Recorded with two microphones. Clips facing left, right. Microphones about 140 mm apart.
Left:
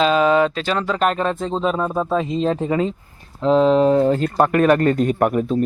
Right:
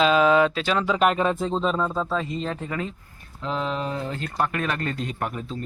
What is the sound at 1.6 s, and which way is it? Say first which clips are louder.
Speech: left 4 dB; 15° left (ahead or behind).